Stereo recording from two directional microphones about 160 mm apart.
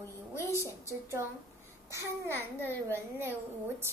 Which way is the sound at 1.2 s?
20° right (ahead or behind).